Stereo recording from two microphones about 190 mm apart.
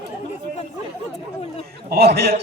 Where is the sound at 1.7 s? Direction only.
55° right (ahead or behind).